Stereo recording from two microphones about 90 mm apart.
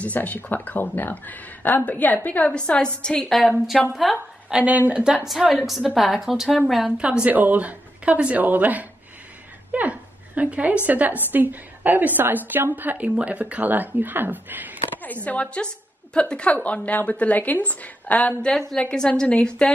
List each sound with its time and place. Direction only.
0.0 s a woman's voice: 15° left (ahead or behind); by 6.6 s 5° right (ahead or behind)
7.2 s a woman's voice: 20° right (ahead or behind)
15.2 s a woman's voice: 15° left (ahead or behind)